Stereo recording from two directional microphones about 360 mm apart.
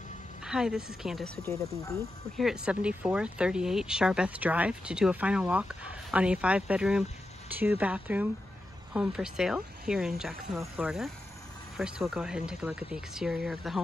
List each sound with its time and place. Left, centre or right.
0.4 s a woman's voice: centre